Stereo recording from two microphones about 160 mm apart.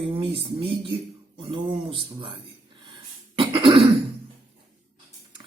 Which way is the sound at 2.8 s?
30° right (ahead or behind).